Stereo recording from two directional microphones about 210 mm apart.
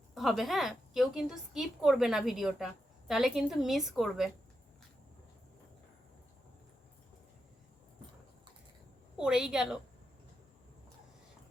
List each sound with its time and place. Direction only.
0.1 s a woman's voice: centre (ahead or behind)
9.1 s a woman's voice: 5° right (ahead or behind)